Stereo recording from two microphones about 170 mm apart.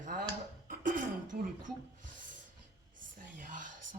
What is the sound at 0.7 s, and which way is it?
Throat clearing, 50° right (ahead or behind).